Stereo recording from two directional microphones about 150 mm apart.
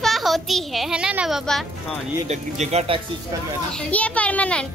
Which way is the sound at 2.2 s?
50° right (ahead or behind).